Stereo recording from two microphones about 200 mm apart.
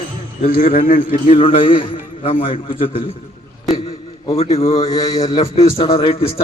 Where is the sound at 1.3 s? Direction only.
25° left (ahead or behind).